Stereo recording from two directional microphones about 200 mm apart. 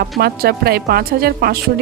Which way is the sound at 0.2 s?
50° right (ahead or behind).